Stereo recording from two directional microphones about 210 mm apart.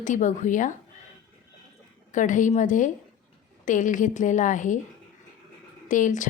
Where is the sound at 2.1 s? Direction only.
35° left (ahead or behind).